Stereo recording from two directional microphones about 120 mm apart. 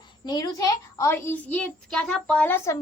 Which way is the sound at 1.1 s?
15° left (ahead or behind).